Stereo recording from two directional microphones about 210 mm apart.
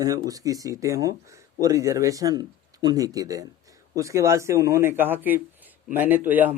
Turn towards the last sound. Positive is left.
turn(degrees=-10)  # may be behind; listen again after turning